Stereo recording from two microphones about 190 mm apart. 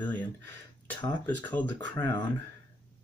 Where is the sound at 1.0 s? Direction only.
25° left (ahead or behind).